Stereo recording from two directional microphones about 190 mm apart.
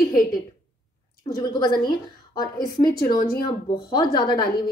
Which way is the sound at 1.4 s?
20° left (ahead or behind).